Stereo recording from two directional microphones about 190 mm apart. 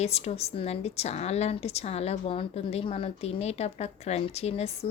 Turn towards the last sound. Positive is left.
turn(degrees=35)  # may be behind; listen again after turning